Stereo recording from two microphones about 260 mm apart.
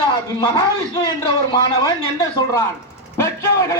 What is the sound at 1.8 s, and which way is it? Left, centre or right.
Speech, centre.